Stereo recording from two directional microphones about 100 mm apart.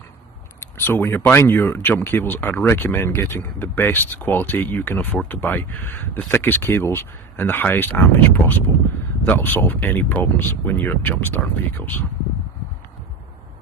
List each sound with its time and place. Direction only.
0.6 s speech: 25° left (ahead or behind)